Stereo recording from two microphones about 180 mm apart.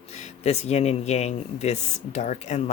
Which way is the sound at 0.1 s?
40° left (ahead or behind).